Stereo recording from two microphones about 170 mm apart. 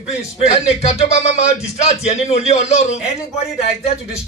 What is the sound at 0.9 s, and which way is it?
A man's voice, 40° left (ahead or behind).